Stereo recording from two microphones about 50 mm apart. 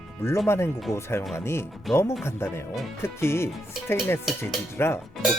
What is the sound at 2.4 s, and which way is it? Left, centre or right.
Speech, left.